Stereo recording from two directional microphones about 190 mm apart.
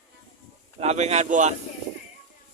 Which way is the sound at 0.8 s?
35° right (ahead or behind).